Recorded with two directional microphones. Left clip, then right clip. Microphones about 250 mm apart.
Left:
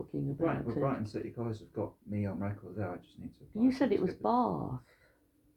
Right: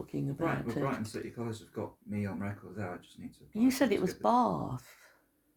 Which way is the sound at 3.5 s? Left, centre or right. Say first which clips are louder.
Right 1 dB; right.